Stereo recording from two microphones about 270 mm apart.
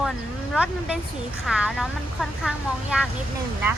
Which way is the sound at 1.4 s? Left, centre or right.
Centre.